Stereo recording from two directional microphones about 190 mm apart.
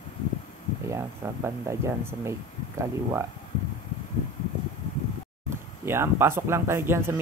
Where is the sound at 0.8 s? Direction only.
15° right (ahead or behind).